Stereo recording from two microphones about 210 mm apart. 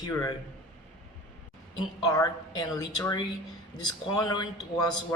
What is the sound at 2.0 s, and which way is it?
A woman's voice, 15° left (ahead or behind).